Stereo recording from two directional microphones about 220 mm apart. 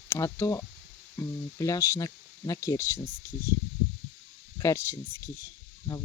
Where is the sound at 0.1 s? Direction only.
15° left (ahead or behind).